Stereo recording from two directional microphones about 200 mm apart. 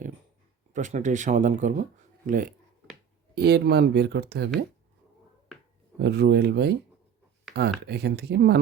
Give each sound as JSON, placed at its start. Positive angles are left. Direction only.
{"t": 0.7, "sound": "speech", "side_deg": -40}
{"t": 3.3, "sound": "speech", "side_deg": -55}
{"t": 6.0, "sound": "speech", "side_deg": -55}